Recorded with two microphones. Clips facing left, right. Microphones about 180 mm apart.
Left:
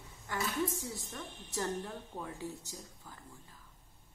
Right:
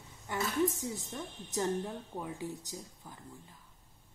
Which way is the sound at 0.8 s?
20° right (ahead or behind).